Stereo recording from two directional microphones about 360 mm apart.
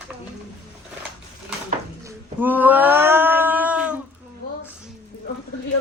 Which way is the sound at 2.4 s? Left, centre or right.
Centre.